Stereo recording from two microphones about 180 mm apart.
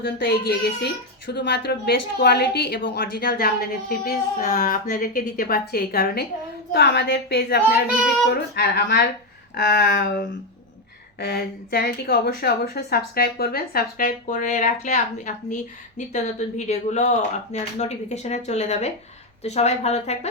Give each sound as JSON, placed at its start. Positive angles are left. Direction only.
{"t": 0.0, "sound": "speech", "side_deg": 60}
{"t": 4.4, "sound": "a woman's voice", "side_deg": 45}
{"t": 7.9, "sound": "speech", "side_deg": 0}
{"t": 8.3, "sound": "speech", "side_deg": 65}